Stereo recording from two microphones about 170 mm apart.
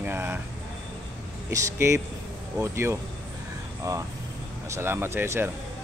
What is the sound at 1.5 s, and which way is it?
Speech, 15° right (ahead or behind).